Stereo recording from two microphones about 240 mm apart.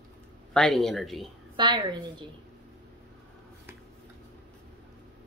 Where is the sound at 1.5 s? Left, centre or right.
Centre.